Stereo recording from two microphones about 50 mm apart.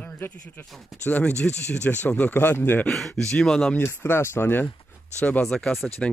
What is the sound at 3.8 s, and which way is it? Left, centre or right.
Speech, left.